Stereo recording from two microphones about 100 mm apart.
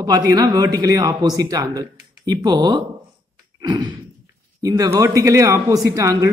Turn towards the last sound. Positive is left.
turn(degrees=-35)  # may be behind; listen again after turning